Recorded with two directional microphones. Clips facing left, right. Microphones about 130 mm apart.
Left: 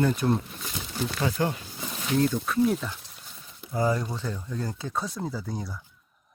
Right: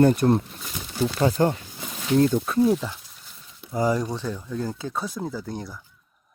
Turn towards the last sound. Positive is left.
turn(degrees=0)  # may be behind; listen again after turning